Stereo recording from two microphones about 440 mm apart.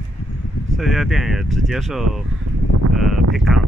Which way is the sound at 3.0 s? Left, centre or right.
Centre.